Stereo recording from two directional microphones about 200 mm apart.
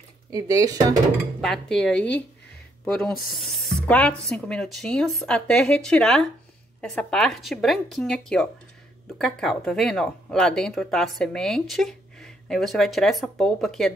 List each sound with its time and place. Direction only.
0.3 s speech: 15° right (ahead or behind)
1.4 s a woman's voice: centre (ahead or behind)